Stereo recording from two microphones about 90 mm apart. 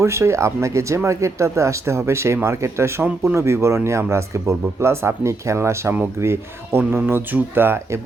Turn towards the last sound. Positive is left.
turn(degrees=-25)  # may be behind; listen again after turning